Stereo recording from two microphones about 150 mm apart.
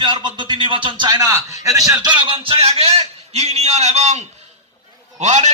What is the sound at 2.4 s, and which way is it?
Speech, 40° right (ahead or behind).